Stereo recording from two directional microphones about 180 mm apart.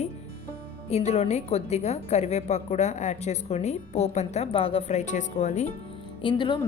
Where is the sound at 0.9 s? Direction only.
35° left (ahead or behind).